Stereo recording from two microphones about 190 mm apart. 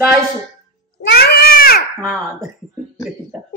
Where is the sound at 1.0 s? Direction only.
55° left (ahead or behind).